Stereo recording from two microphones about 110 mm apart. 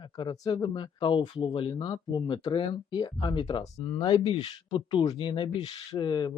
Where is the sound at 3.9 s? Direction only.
50° left (ahead or behind).